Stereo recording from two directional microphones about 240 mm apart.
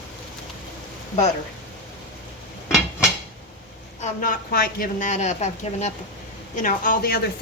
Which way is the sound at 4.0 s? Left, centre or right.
Left.